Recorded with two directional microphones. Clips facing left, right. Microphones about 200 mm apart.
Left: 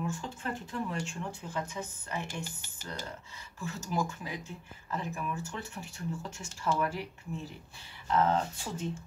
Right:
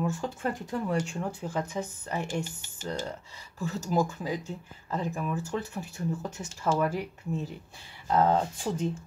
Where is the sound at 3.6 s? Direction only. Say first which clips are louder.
Right 6 dB; 40° right (ahead or behind).